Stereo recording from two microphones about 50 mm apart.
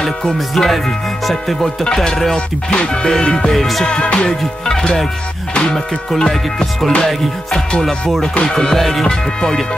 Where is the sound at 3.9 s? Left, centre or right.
Left.